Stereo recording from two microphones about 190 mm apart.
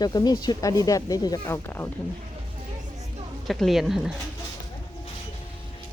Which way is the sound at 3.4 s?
Centre (ahead or behind).